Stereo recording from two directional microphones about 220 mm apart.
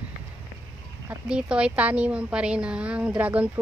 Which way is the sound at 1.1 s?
5° right (ahead or behind).